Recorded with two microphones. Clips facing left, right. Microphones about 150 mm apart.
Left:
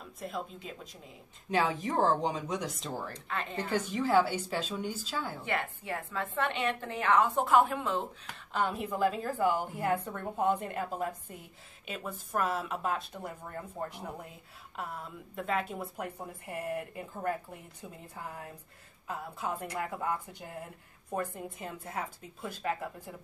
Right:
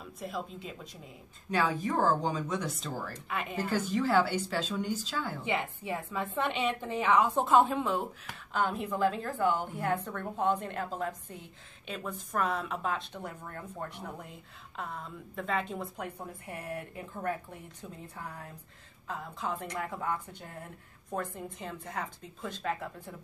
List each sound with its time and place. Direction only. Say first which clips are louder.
0.2 s a woman's voice: even; centre (ahead or behind)
1.5 s speech: even; 25° left (ahead or behind)
3.1 s a woman's voice: right 1 dB; 10° right (ahead or behind)
3.9 s a woman's voice: even; 15° left (ahead or behind)
5.4 s a woman's voice: right 2 dB; 15° right (ahead or behind)
8.5 s a woman's voice: even; centre (ahead or behind)